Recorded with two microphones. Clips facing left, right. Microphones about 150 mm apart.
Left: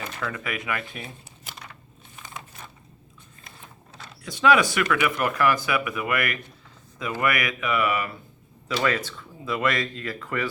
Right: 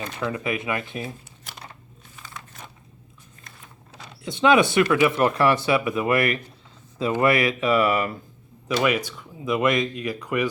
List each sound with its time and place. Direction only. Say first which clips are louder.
0.2 s speech: right 6 dB; 25° right (ahead or behind)
4.2 s speech: right 2 dB; 25° right (ahead or behind)
8.6 s speech: right 3 dB; 15° right (ahead or behind)